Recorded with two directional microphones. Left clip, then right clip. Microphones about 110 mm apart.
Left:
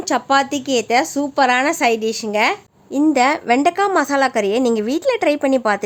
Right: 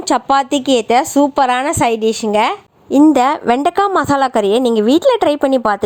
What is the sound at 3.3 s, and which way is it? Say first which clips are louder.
A woman's voice: right 2 dB; 40° right (ahead or behind).